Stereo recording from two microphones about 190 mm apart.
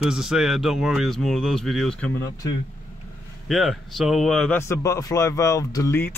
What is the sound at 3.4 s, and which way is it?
A man's voice, centre (ahead or behind).